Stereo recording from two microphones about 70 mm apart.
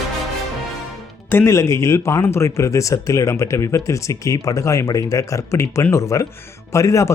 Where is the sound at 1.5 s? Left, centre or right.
Left.